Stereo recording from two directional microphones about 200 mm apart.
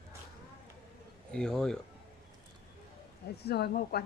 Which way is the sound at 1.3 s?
5° left (ahead or behind).